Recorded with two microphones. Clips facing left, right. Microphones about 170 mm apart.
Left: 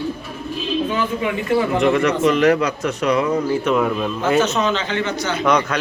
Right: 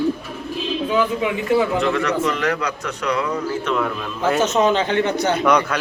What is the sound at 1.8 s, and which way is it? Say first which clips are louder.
Speech: left 4 dB; 20° left (ahead or behind).